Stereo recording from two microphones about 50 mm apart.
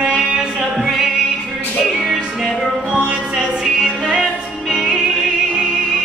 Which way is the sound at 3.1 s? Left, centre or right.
Centre.